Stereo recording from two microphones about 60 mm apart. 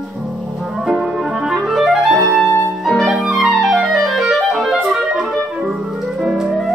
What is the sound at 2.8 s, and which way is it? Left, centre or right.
Music, centre.